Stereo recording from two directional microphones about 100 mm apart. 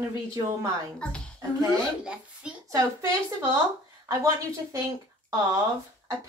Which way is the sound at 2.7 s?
30° right (ahead or behind).